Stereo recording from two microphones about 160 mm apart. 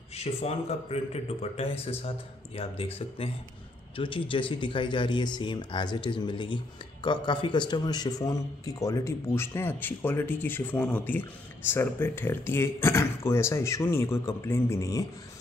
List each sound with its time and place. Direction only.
0.1 s a man's voice: 40° left (ahead or behind); by 15.0 s 20° left (ahead or behind)